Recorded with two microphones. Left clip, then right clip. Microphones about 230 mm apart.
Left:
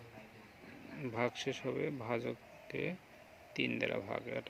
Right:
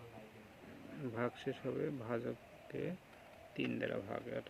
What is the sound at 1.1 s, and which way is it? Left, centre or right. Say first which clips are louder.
Speech: left 4 dB; left.